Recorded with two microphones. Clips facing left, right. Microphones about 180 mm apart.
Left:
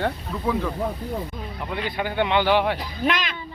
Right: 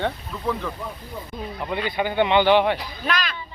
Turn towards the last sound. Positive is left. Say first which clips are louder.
# left 1 dB
turn(degrees=20)  # may be behind; listen again after turning